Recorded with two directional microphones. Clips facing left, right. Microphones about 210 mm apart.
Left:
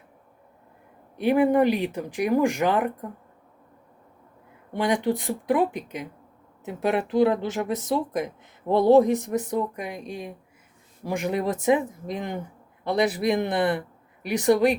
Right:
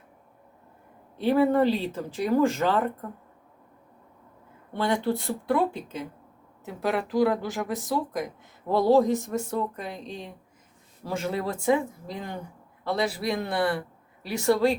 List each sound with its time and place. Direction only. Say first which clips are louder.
1.1 s speech: left 2 dB; 15° left (ahead or behind)
4.7 s speech: left 2 dB; 15° left (ahead or behind)